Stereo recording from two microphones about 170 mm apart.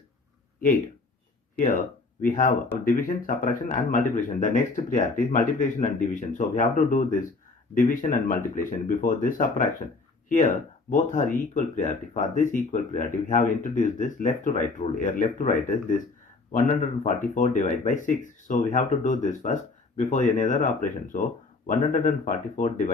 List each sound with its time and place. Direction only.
1.5 s speech: 50° left (ahead or behind)